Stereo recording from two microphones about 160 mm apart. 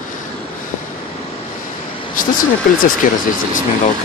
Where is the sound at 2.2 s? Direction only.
60° left (ahead or behind).